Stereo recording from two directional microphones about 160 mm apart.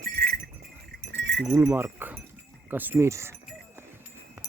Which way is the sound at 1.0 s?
90° right.